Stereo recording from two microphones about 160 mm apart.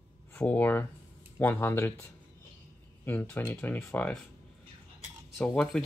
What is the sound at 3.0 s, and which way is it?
Speech, 10° left (ahead or behind).